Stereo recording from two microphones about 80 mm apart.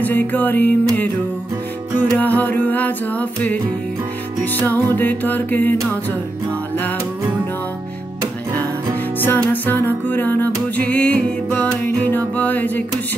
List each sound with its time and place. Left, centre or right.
0.0 s music: left
2.1 s music: left
8.5 s music: left